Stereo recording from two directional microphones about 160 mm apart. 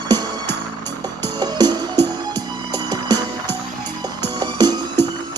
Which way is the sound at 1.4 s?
25° right (ahead or behind).